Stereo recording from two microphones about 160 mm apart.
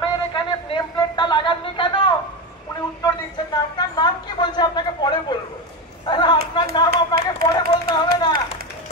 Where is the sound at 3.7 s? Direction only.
25° left (ahead or behind).